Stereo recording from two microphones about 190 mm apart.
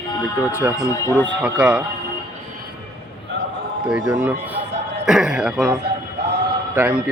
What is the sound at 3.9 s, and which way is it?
A man's voice, 5° right (ahead or behind).